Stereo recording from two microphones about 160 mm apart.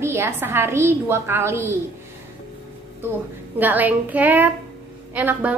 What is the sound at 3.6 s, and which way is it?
A woman's voice, 10° right (ahead or behind).